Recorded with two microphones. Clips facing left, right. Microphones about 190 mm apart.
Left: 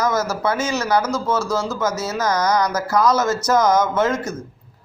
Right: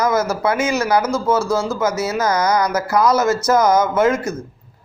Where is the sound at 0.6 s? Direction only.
10° right (ahead or behind).